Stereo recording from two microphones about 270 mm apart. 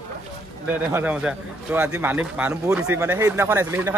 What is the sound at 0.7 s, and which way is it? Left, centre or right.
A man's voice, centre.